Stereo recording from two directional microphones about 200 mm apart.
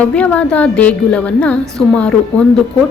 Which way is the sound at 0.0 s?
5° left (ahead or behind).